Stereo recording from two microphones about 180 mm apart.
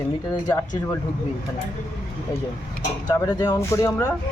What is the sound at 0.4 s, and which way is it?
Speech, 20° left (ahead or behind).